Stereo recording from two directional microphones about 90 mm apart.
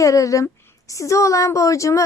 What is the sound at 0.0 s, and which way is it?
A woman's voice, 35° left (ahead or behind).